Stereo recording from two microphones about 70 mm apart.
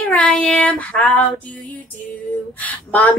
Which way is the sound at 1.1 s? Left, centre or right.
Left.